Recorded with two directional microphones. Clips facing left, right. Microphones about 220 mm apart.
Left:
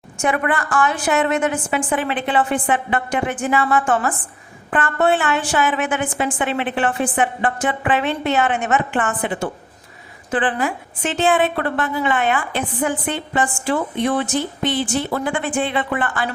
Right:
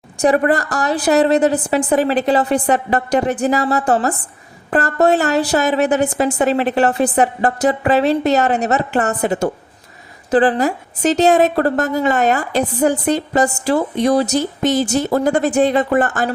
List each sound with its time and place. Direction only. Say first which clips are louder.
0.2 s a woman's voice: right 6 dB; 35° right (ahead or behind)